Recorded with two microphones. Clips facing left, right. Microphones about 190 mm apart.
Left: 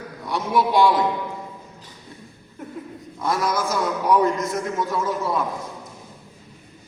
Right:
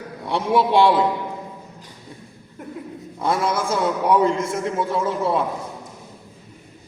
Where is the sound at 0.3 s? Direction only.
30° right (ahead or behind).